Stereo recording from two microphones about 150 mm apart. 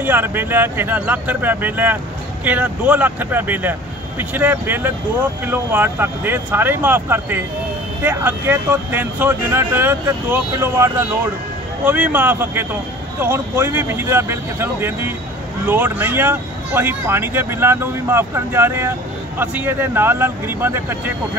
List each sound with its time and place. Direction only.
0.0 s speech: 15° right (ahead or behind)